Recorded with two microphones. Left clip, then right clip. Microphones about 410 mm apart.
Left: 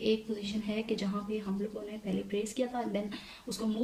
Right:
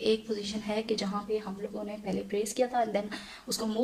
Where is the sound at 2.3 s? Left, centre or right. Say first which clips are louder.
Right 6 dB; centre.